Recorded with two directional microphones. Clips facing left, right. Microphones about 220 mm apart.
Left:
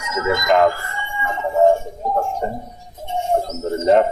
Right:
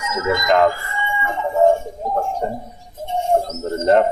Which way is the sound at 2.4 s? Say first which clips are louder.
Right 1 dB; 5° left (ahead or behind).